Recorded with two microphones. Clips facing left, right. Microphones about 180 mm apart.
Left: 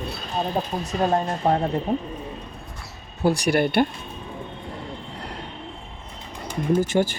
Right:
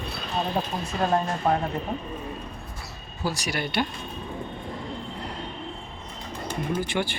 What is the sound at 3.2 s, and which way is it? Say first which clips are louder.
Speech: left 9 dB; 60° left (ahead or behind).